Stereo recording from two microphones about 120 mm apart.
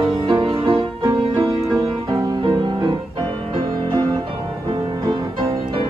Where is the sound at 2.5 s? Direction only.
35° right (ahead or behind).